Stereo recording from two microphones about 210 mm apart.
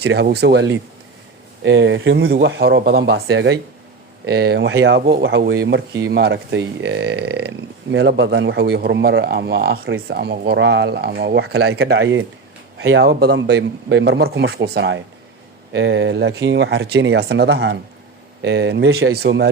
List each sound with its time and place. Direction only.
0.0 s speech: 55° right (ahead or behind)
13.1 s speech: 50° right (ahead or behind)